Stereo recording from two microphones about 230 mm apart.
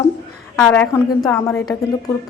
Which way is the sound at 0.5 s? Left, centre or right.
Centre.